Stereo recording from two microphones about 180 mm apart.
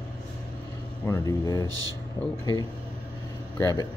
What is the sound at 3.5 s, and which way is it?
Speech, 15° left (ahead or behind).